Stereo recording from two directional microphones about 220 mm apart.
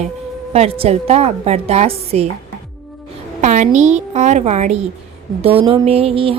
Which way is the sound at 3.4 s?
35° right (ahead or behind).